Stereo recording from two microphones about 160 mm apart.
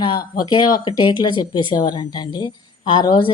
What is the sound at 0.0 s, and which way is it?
A woman's voice, 30° left (ahead or behind).